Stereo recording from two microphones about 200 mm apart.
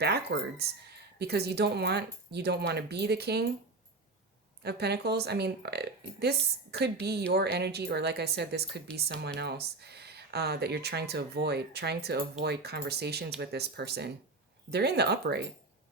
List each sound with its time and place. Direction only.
0.0 s speech: 55° right (ahead or behind)
4.6 s speech: 55° right (ahead or behind)
8.9 s speech: 5° left (ahead or behind)
9.2 s speech: 55° right (ahead or behind)